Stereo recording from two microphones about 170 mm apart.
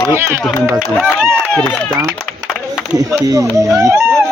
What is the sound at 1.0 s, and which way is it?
Speech, 10° right (ahead or behind).